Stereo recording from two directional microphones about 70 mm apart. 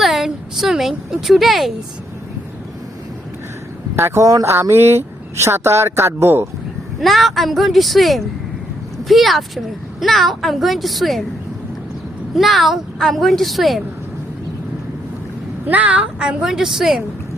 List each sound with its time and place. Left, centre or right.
0.0 s a woman's voice: centre
3.9 s a man's voice: right
4.7 s speech: right
7.0 s a woman's voice: centre
12.3 s a woman's voice: centre
15.6 s a woman's voice: right; by 17.0 s centre